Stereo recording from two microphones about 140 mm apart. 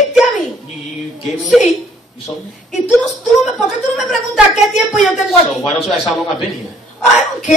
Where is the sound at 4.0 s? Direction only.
Centre (ahead or behind).